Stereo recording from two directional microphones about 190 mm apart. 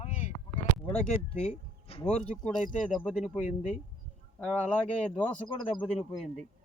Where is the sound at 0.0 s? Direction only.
40° left (ahead or behind).